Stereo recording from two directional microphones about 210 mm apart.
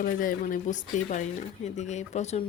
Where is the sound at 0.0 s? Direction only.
40° left (ahead or behind).